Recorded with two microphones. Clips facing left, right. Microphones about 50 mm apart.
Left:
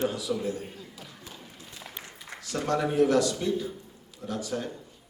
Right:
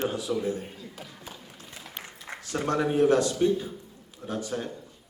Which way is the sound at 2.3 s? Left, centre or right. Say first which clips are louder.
Right 1 dB; right.